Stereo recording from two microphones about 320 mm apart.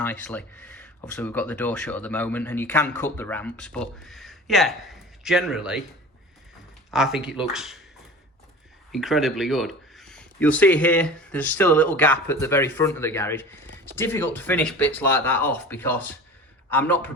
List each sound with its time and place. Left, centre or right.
0.0 s speech: centre
6.9 s speech: centre
8.9 s speech: centre